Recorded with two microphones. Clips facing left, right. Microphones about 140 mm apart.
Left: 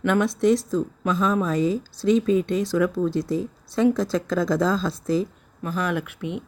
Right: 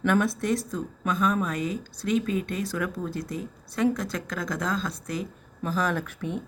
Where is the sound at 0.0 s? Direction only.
20° left (ahead or behind).